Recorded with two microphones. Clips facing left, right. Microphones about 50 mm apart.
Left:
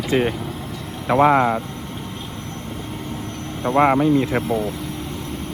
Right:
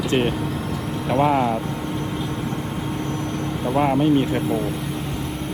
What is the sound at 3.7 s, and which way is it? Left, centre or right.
Speech, left.